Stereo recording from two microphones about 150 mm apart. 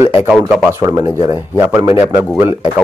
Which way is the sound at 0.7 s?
20° right (ahead or behind).